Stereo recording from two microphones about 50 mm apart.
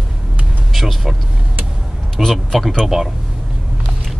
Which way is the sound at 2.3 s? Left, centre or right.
Centre.